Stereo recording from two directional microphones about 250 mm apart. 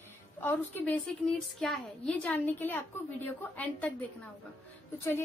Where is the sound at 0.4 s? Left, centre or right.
Centre.